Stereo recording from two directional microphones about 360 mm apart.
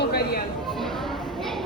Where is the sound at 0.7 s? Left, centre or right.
Centre.